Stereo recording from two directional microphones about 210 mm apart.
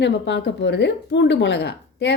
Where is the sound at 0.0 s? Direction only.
55° left (ahead or behind).